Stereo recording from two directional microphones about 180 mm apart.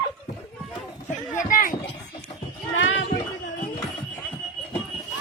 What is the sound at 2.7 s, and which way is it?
Clip-clop, 90° left.